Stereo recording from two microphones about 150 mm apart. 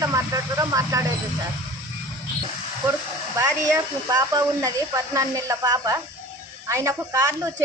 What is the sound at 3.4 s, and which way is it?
Speech, 25° right (ahead or behind).